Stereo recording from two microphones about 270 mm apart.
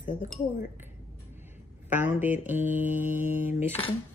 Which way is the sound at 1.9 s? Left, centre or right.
Centre.